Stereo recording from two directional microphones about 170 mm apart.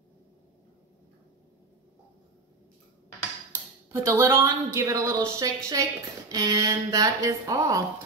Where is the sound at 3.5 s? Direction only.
15° right (ahead or behind).